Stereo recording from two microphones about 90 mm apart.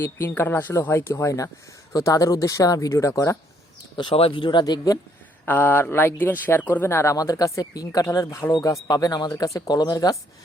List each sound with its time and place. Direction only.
0.0 s speech: 30° left (ahead or behind)
3.9 s speech: 80° left; by 4.9 s 50° left (ahead or behind)
5.5 s speech: 20° left (ahead or behind)
8.5 s speech: 45° left (ahead or behind)